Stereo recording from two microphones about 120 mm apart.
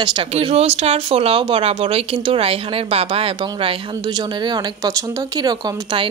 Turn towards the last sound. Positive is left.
turn(degrees=-40)  # may be behind; listen again after turning